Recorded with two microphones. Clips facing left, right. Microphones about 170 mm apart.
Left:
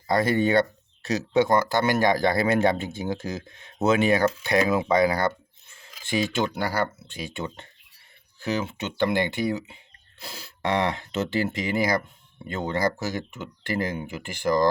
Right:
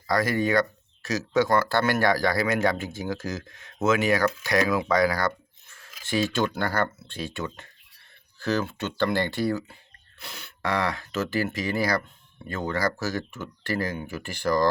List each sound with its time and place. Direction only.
0.1 s speech: 25° left (ahead or behind)
7.3 s speech: 25° left (ahead or behind)
10.2 s speech: 30° left (ahead or behind)